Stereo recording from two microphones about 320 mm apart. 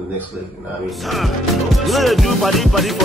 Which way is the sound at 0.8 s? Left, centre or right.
Centre.